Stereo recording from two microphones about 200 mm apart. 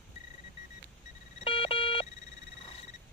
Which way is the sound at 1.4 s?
25° left (ahead or behind).